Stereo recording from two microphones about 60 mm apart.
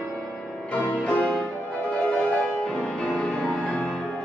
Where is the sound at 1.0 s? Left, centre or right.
Centre.